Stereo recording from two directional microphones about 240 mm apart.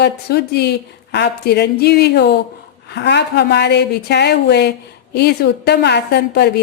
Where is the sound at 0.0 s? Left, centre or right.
Left.